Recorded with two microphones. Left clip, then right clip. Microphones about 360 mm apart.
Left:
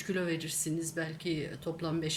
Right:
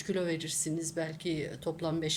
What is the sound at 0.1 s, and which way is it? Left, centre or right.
Speech, centre.